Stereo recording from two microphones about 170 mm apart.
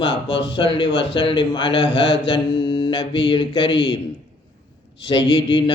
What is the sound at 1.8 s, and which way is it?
Speech, 90° left.